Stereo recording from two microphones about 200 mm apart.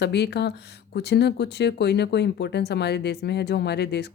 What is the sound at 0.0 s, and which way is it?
Speech, 55° left (ahead or behind).